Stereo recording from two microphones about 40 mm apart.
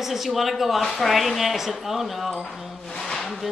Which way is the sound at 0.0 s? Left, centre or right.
Centre.